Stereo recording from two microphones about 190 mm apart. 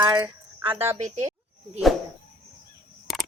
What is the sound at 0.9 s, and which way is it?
Speech, 35° right (ahead or behind).